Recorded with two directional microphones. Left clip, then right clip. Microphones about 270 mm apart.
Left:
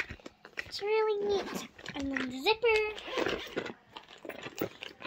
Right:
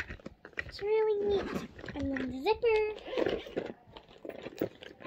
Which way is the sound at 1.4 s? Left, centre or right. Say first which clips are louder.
Right 1 dB; centre.